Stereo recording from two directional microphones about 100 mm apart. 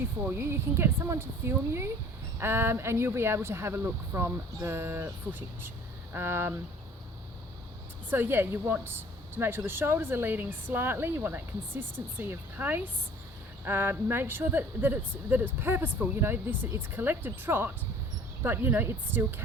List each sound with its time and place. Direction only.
0.3 s a woman's voice: 25° right (ahead or behind)
8.1 s a woman's voice: 20° right (ahead or behind)